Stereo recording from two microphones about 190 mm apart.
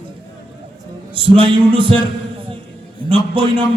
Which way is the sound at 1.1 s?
25° right (ahead or behind).